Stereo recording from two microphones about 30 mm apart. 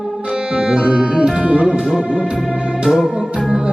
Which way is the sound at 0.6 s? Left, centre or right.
Right.